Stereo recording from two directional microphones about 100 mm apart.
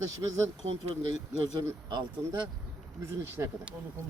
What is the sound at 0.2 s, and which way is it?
Speech, 35° right (ahead or behind).